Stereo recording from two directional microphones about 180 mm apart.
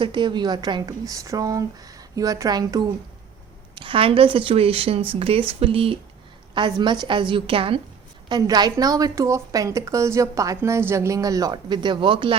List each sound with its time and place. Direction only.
0.0 s a woman's voice: 25° right (ahead or behind)